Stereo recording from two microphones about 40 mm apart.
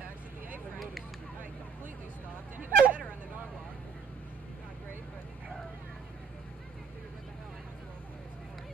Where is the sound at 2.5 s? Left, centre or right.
Right.